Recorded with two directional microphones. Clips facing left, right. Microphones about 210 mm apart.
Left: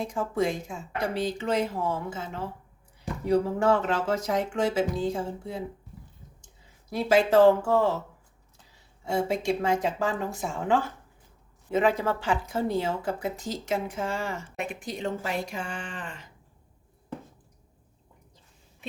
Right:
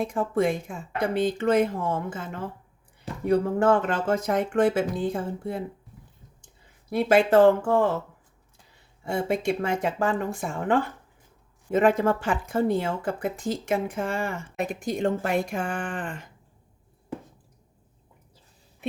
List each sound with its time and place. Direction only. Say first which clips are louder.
0.0 s speech: right 3 dB; 55° right (ahead or behind)
6.9 s speech: right 2 dB; 55° right (ahead or behind)
9.0 s speech: right 1 dB; 55° right (ahead or behind)
14.6 s speech: right 7 dB; 40° right (ahead or behind)